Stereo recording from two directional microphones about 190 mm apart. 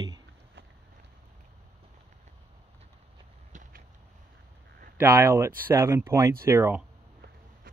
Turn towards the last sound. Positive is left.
turn(degrees=-15)  # may be behind; listen again after turning